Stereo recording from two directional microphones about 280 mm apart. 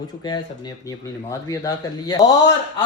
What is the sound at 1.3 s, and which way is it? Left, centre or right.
Speech, centre.